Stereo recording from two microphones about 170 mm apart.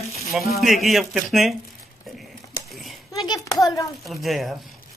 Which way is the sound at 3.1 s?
25° left (ahead or behind).